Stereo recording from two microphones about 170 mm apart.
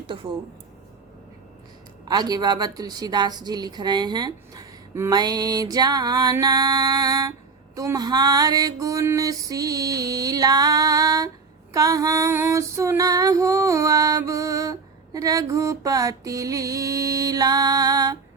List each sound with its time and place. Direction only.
0.1 s female singing: 30° right (ahead or behind)
2.0 s female singing: 25° right (ahead or behind)